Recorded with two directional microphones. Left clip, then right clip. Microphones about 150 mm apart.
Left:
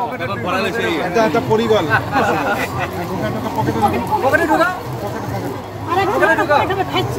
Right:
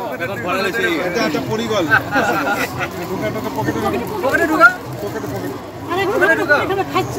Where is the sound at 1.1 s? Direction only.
30° left (ahead or behind).